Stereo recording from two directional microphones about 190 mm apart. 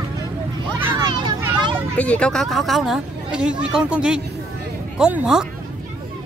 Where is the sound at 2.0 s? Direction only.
5° left (ahead or behind).